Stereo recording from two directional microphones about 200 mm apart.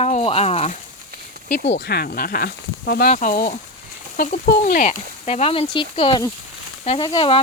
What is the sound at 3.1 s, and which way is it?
Speech, 40° left (ahead or behind).